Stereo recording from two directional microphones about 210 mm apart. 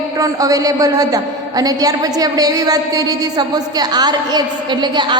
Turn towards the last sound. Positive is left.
turn(degrees=-20)  # may be behind; listen again after turning